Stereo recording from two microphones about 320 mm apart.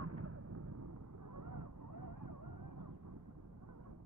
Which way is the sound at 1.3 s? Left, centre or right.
Right.